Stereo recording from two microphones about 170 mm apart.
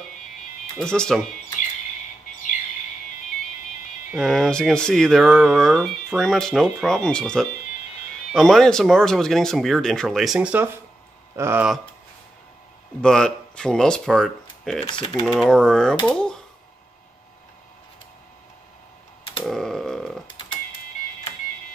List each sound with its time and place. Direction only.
0.7 s speech: 5° left (ahead or behind)
4.2 s speech: centre (ahead or behind); by 11.6 s 15° right (ahead or behind)
13.0 s speech: 5° left (ahead or behind)
14.9 s typing: 25° left (ahead or behind)
15.3 s speech: 5° left (ahead or behind)
16.1 s a sound: 5° left (ahead or behind)
19.4 s a sound: centre (ahead or behind)